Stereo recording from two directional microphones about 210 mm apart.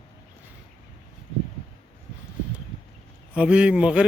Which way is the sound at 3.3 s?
5° right (ahead or behind).